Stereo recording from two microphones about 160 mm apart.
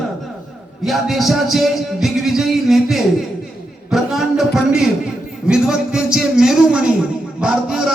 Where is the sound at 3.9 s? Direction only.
Centre (ahead or behind).